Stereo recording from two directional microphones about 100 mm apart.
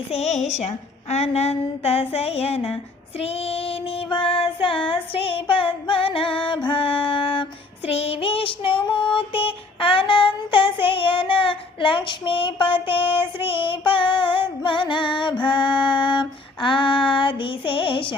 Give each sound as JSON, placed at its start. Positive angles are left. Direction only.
{"t": 0.1, "sound": "a sound", "side_deg": 90}
{"t": 3.2, "sound": "child singing", "side_deg": 75}
{"t": 6.7, "sound": "music", "side_deg": 65}
{"t": 7.9, "sound": "child singing", "side_deg": 80}